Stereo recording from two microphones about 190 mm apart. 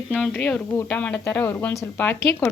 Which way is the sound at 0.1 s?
10° left (ahead or behind).